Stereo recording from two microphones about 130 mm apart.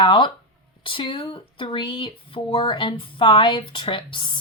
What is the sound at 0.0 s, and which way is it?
Speech, 35° left (ahead or behind).